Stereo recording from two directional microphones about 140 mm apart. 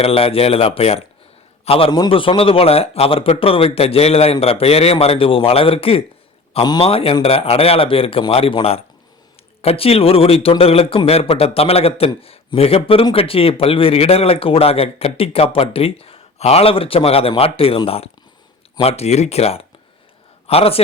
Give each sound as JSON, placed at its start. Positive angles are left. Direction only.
{"t": 0.0, "sound": "speech", "side_deg": 45}
{"t": 6.6, "sound": "a man's voice", "side_deg": 30}
{"t": 6.8, "sound": "speech", "side_deg": 45}